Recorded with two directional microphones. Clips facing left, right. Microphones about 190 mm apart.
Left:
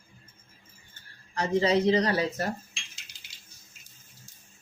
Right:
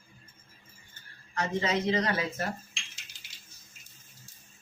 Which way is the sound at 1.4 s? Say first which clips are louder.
Left 5 dB; 35° left (ahead or behind).